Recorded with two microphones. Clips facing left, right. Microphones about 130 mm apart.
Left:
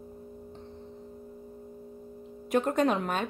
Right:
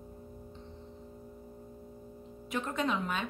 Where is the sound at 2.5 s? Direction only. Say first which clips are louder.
Left 7 dB; 50° left (ahead or behind).